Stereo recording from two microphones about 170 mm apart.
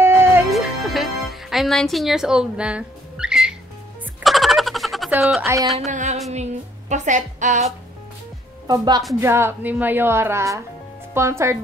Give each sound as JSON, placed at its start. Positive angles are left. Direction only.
{"t": 0.0, "sound": "music", "side_deg": -15}
{"t": 0.5, "sound": "music", "side_deg": 0}
{"t": 4.2, "sound": "a sound", "side_deg": 0}
{"t": 5.2, "sound": "speech", "side_deg": 0}
{"t": 5.9, "sound": "a woman's voice", "side_deg": -45}
{"t": 8.6, "sound": "a woman's voice", "side_deg": -25}